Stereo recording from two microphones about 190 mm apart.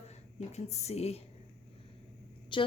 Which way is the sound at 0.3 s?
35° left (ahead or behind).